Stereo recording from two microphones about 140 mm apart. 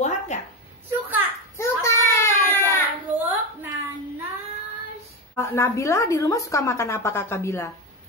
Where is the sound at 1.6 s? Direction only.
20° left (ahead or behind).